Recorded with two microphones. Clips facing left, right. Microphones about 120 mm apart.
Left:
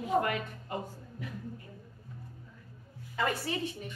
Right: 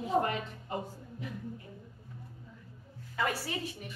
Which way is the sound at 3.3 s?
10° right (ahead or behind).